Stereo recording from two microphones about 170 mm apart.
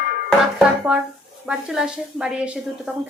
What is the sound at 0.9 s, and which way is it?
A woman's voice, 5° right (ahead or behind).